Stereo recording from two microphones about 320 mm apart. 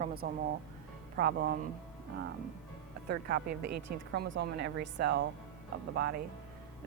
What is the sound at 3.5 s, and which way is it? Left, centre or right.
Speech, right.